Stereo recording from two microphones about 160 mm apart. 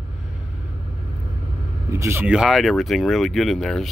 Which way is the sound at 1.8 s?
15° right (ahead or behind).